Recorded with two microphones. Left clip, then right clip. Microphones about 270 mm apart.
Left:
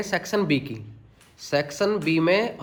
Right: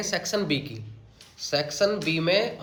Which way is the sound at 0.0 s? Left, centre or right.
Left.